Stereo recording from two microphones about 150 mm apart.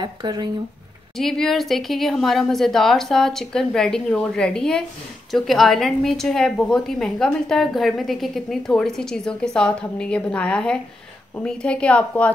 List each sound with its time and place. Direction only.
0.0 s speech: 30° right (ahead or behind)
1.1 s a woman's voice: centre (ahead or behind)